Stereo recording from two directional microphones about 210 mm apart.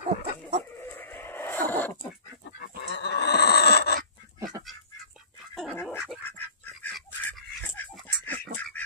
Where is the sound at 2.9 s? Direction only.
55° left (ahead or behind).